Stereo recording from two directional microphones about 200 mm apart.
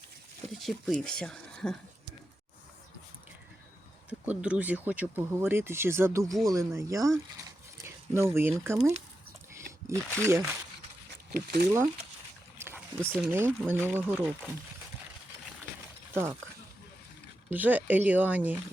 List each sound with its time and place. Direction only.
0.5 s speech: centre (ahead or behind)
4.3 s speech: 5° right (ahead or behind)
7.3 s a sound: 15° right (ahead or behind)
9.6 s speech: 15° right (ahead or behind)
11.3 s speech: 50° right (ahead or behind)
12.5 s speech: 10° right (ahead or behind)
16.1 s speech: 15° right (ahead or behind)
17.5 s speech: 10° right (ahead or behind)